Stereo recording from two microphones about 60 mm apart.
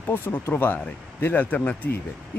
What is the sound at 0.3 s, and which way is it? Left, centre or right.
Speech, left.